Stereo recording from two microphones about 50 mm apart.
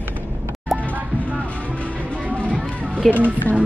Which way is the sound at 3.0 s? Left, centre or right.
Centre.